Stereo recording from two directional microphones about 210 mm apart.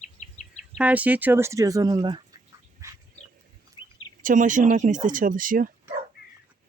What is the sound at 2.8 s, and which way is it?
Dog, 15° right (ahead or behind).